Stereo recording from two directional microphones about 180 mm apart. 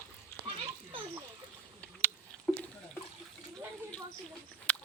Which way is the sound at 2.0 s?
5° left (ahead or behind).